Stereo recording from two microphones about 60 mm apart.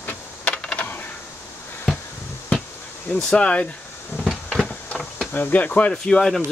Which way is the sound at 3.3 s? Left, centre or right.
Left.